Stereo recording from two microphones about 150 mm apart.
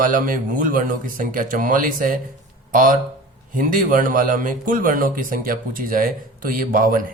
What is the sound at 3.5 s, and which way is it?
Speech, 65° right (ahead or behind).